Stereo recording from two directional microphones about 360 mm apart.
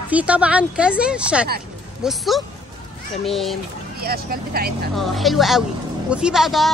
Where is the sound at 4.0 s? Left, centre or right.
Right.